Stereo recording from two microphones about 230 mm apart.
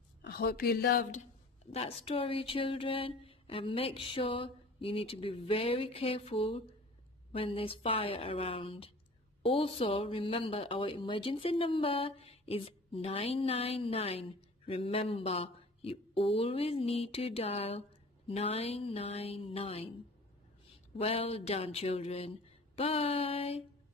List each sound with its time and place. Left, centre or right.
0.2 s speech: left
1.7 s speech: left
21.0 s speech: left